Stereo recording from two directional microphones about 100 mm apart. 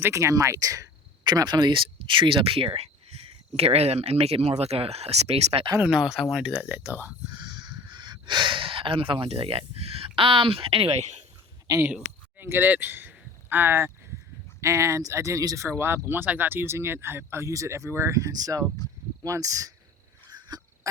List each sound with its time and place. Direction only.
0.0 s speech: 30° right (ahead or behind)
1.2 s speech: 45° right (ahead or behind); by 5.6 s 85° right
5.8 s speech: 10° right (ahead or behind)
7.3 s speech: 45° right (ahead or behind); by 11.0 s 70° right (ahead or behind)
11.7 s speech: 35° right (ahead or behind)
12.4 s speech: 20° right (ahead or behind); by 18.6 s 40° right (ahead or behind)
18.8 s speech: 40° left (ahead or behind)
19.2 s speech: 35° right (ahead or behind)